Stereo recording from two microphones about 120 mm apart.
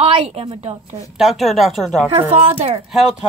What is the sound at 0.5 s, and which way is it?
Speech, 60° right (ahead or behind).